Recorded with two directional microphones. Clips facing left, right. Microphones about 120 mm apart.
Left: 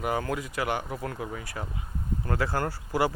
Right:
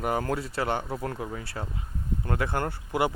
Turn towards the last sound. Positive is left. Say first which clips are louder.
# even
turn(degrees=-20)  # may be behind; listen again after turning